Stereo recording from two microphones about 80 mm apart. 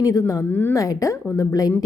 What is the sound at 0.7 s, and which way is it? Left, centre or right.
A woman's voice, left.